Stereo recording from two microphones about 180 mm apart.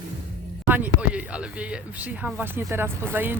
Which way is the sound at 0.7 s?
10° right (ahead or behind).